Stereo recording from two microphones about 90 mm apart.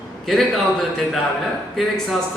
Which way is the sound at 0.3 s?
Centre (ahead or behind).